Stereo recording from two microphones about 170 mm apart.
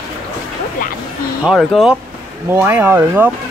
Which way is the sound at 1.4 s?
Centre (ahead or behind).